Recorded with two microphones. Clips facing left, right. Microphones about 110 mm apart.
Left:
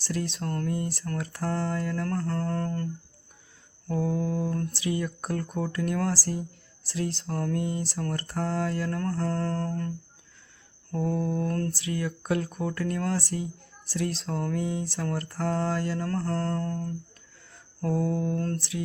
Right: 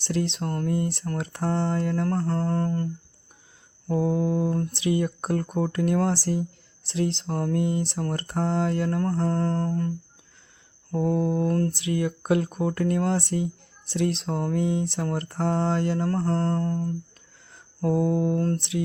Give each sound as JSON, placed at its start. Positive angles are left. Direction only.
{"t": 0.0, "sound": "speech", "side_deg": -25}
{"t": 10.9, "sound": "speech", "side_deg": -20}